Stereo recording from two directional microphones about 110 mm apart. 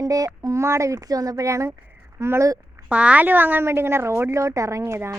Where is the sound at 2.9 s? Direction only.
10° right (ahead or behind).